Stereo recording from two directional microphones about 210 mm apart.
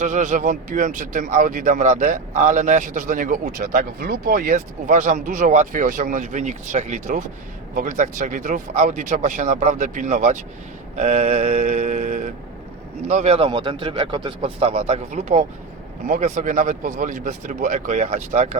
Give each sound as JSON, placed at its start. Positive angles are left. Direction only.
{"t": 0.0, "sound": "a man's voice", "side_deg": -35}